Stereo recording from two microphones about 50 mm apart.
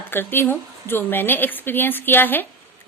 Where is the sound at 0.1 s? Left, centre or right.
Left.